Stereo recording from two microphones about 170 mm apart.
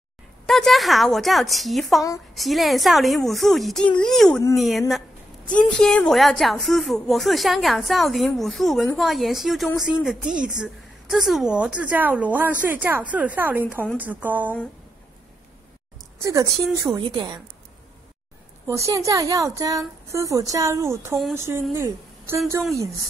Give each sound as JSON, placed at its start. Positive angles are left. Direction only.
{"t": 0.5, "sound": "a woman's voice", "side_deg": 0}
{"t": 16.2, "sound": "a woman's voice", "side_deg": -20}
{"t": 18.7, "sound": "a woman's voice", "side_deg": -20}